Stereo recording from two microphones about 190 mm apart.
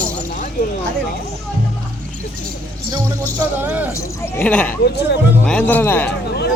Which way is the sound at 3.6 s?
10° right (ahead or behind).